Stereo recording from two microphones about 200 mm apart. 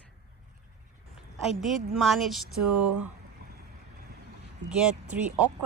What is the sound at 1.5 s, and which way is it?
Speech, centre (ahead or behind).